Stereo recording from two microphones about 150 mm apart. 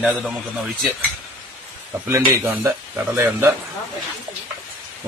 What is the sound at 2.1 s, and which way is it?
Speech, 20° right (ahead or behind).